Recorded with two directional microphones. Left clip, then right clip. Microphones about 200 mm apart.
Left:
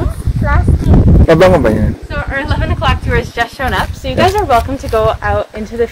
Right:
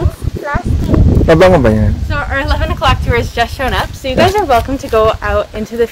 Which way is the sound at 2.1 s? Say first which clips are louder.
Right 4 dB; 35° right (ahead or behind).